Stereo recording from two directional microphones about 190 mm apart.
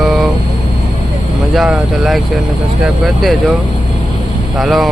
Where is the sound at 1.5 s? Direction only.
Centre (ahead or behind).